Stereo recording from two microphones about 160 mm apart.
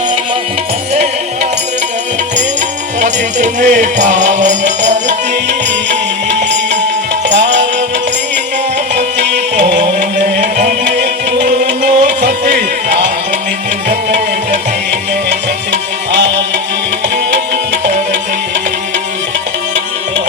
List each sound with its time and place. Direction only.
3.0 s music: 50° right (ahead or behind)
7.3 s music: 90° right
9.1 s music: 90° right
10.4 s music: 50° right (ahead or behind)
10.8 s music: 90° right